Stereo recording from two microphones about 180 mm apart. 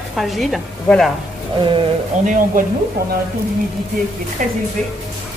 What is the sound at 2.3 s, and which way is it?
Speech, 50° right (ahead or behind).